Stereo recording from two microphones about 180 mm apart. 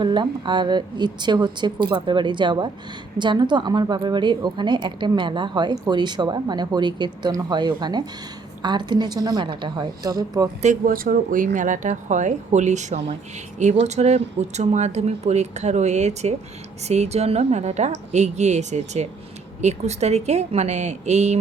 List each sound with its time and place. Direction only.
0.0 s a woman's voice: 25° right (ahead or behind)
10.6 s speech: 45° right (ahead or behind)